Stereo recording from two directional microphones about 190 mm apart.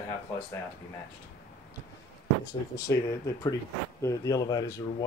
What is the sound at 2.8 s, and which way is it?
Speech, 20° left (ahead or behind).